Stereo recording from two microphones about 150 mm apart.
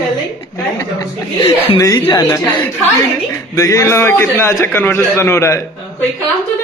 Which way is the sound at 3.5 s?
20° left (ahead or behind).